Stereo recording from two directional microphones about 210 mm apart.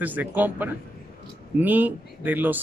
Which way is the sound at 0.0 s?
10° right (ahead or behind).